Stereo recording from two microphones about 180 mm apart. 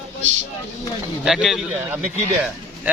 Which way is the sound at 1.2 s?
Centre (ahead or behind).